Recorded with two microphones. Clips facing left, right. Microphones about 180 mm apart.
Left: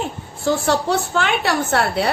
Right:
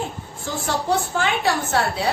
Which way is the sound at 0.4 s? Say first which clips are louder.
Left 6 dB; 70° left (ahead or behind).